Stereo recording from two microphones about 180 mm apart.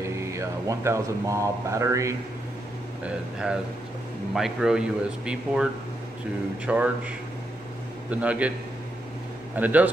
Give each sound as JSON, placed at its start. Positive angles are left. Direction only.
{"t": 0.0, "sound": "speech", "side_deg": -15}
{"t": 3.0, "sound": "a man's voice", "side_deg": -5}
{"t": 8.1, "sound": "a man's voice", "side_deg": -5}
{"t": 9.6, "sound": "a man's voice", "side_deg": -10}